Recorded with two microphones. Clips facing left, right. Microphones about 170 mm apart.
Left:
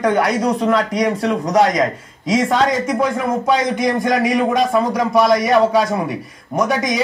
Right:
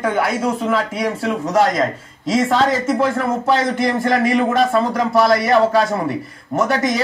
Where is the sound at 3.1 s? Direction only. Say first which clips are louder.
Even; 15° left (ahead or behind).